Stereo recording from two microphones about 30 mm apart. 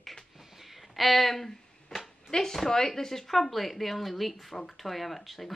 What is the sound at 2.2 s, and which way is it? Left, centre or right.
Speech, centre.